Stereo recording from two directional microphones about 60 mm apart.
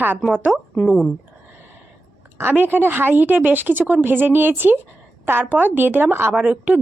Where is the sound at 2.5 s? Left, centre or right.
Right.